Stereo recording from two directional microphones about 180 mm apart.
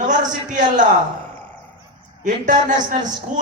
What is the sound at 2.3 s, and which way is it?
Speech, 45° right (ahead or behind).